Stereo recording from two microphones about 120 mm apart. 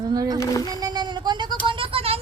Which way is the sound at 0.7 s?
35° right (ahead or behind).